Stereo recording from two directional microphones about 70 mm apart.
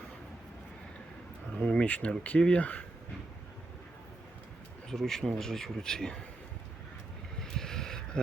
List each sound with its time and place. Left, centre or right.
1.5 s speech: centre
4.9 s speech: centre
7.3 s a sound: centre